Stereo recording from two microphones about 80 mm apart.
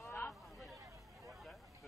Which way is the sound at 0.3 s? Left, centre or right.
Centre.